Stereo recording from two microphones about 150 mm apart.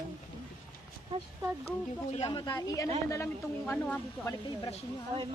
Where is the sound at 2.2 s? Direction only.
30° left (ahead or behind); by 4.3 s 15° left (ahead or behind).